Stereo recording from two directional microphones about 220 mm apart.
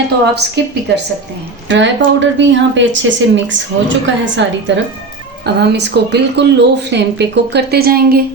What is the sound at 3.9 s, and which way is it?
A woman's voice, 55° right (ahead or behind).